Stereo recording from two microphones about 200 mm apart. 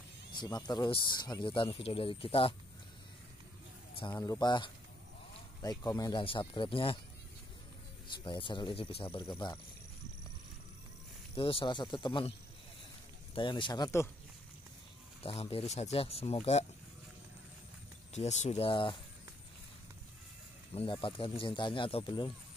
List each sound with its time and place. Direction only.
0.3 s speech: 20° left (ahead or behind)
4.0 s speech: 20° left (ahead or behind)
8.3 s speech: 25° left (ahead or behind)
11.3 s speech: 25° left (ahead or behind)
13.3 s speech: 25° left (ahead or behind)
15.2 s speech: 30° left (ahead or behind)
18.1 s speech: 35° left (ahead or behind)
20.7 s speech: 25° left (ahead or behind)